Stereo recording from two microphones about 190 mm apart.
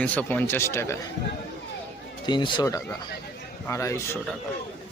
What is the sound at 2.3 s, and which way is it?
Speech, 25° left (ahead or behind).